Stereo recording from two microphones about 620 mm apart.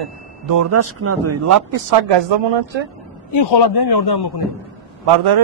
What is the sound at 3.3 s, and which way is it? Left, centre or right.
Speech, left.